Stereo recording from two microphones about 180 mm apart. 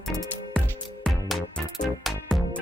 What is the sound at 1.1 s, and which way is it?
Music, centre (ahead or behind).